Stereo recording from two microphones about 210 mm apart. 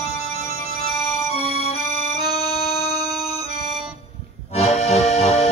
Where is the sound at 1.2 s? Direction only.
30° left (ahead or behind).